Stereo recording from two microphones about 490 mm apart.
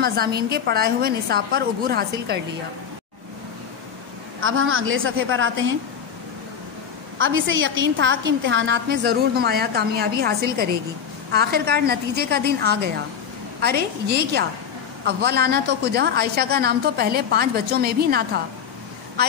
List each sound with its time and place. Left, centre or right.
0.0 s a woman's voice: centre
4.4 s a woman's voice: right
7.2 s a woman's voice: right